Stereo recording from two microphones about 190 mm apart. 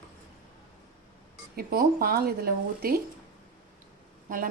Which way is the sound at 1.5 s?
55° right (ahead or behind).